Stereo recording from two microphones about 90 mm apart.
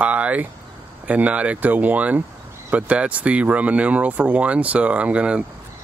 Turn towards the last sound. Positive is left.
turn(degrees=-15)  # may be behind; listen again after turning